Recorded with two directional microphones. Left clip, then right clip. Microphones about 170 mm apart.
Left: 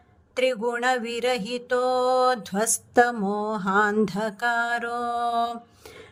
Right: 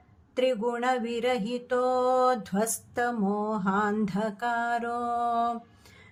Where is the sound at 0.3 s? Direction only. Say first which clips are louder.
Left 3 dB; 45° left (ahead or behind).